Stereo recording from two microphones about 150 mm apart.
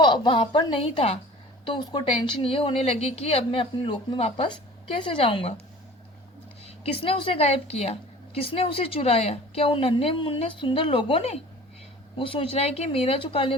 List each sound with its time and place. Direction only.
0.0 s a woman's voice: 30° left (ahead or behind)
6.7 s a woman's voice: 40° left (ahead or behind)